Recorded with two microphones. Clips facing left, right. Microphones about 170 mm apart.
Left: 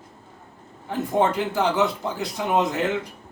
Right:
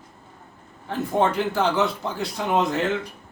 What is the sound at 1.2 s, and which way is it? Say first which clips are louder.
Speech: even; 15° left (ahead or behind).